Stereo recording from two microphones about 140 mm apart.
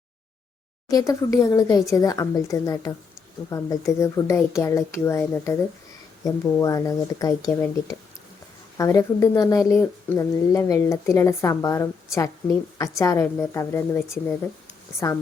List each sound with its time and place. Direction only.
0.9 s speech: 25° left (ahead or behind)
8.8 s speech: 25° left (ahead or behind)